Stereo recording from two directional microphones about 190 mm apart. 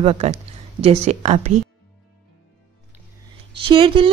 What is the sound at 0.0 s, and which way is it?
Speech, 35° right (ahead or behind).